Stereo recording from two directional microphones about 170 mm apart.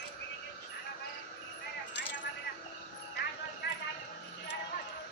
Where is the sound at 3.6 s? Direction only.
75° left (ahead or behind).